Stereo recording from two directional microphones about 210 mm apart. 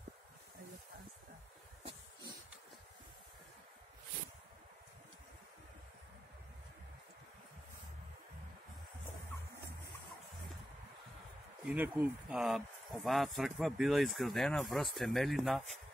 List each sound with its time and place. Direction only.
11.6 s speech: 10° right (ahead or behind)